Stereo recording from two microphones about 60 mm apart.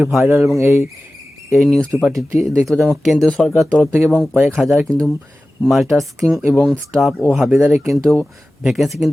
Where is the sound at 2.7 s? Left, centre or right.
Centre.